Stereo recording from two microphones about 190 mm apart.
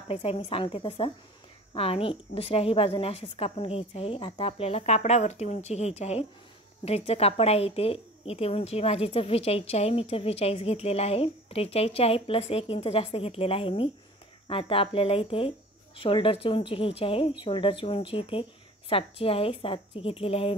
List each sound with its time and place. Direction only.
0.1 s a woman's voice: 30° left (ahead or behind)